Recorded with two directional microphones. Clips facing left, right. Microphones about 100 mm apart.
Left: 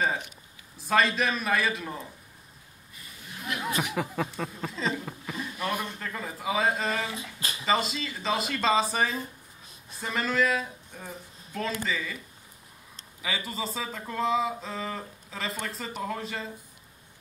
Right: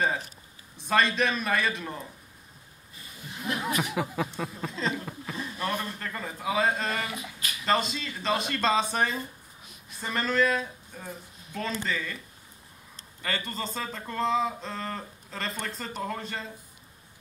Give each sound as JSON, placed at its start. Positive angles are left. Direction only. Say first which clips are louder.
{"t": 0.7, "sound": "speech", "louder": "even", "side_deg": 0}
{"t": 3.5, "sound": "speech", "louder": "right 3 dB", "side_deg": -30}
{"t": 3.9, "sound": "speech", "louder": "even", "side_deg": 0}
{"t": 7.1, "sound": "speech", "louder": "left 1 dB", "side_deg": 30}
{"t": 7.6, "sound": "speech", "louder": "even", "side_deg": 0}
{"t": 13.2, "sound": "speech", "louder": "even", "side_deg": 5}